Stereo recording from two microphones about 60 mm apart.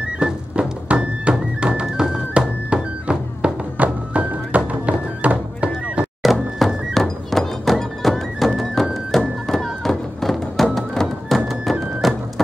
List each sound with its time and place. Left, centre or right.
0.2 s music: centre
6.3 s thunk: centre
6.9 s music: centre